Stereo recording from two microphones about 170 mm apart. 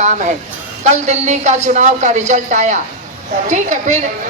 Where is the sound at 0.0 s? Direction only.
45° right (ahead or behind).